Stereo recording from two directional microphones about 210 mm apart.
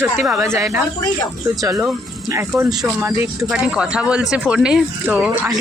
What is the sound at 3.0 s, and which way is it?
Speech, 10° right (ahead or behind).